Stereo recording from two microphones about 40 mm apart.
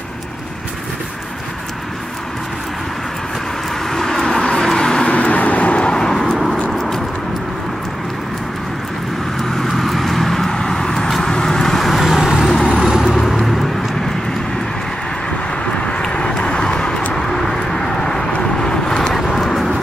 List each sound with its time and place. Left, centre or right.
3.9 s vehicle: centre; by 5.9 s left
5.9 s vehicle: centre
9.4 s vehicle: centre
12.4 s vehicle: centre
12.8 s vehicle: centre
13.1 s vehicle: centre
15.6 s a sound: left
16.4 s vehicle: left
19.1 s horse: centre